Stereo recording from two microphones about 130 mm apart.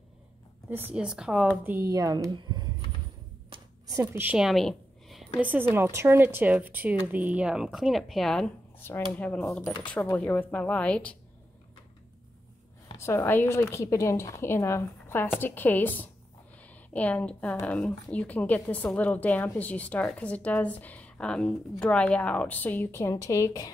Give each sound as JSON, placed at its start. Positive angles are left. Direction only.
{"t": 0.7, "sound": "a woman's voice", "side_deg": -15}
{"t": 1.6, "sound": "a woman's voice", "side_deg": -15}
{"t": 1.9, "sound": "speech", "side_deg": -30}
{"t": 3.8, "sound": "a woman's voice", "side_deg": -20}
{"t": 4.4, "sound": "a sound", "side_deg": 0}
{"t": 5.4, "sound": "a woman's voice", "side_deg": -15}
{"t": 8.7, "sound": "a woman's voice", "side_deg": 15}
{"t": 12.9, "sound": "a woman's voice", "side_deg": 20}